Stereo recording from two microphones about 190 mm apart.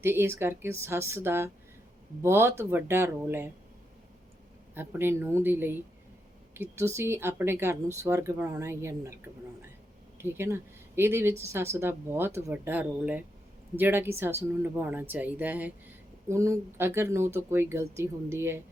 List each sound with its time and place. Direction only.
0.0 s speech: 10° right (ahead or behind)
4.7 s speech: 10° right (ahead or behind)
10.2 s speech: 10° right (ahead or behind)